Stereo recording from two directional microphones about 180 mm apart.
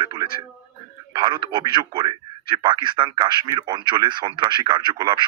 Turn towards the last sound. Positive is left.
turn(degrees=-25)  # may be behind; listen again after turning